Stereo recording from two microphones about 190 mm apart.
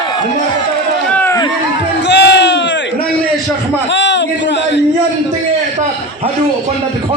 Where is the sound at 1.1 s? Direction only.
10° left (ahead or behind).